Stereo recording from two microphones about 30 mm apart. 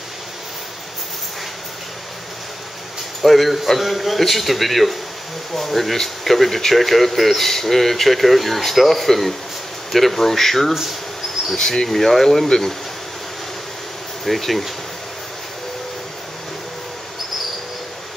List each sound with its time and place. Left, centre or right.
3.2 s speech: centre
10.7 s speech: centre
11.5 s speech: left
14.2 s speech: centre